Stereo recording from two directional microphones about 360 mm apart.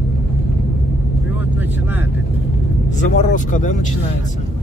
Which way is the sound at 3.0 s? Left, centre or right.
Left.